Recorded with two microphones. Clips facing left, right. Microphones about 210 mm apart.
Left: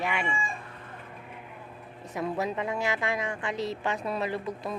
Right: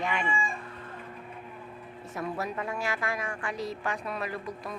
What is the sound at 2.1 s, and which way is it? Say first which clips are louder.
A woman's voice: left 3 dB; 20° left (ahead or behind).